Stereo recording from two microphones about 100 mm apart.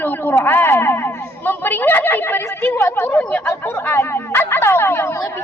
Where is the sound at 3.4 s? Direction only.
25° left (ahead or behind).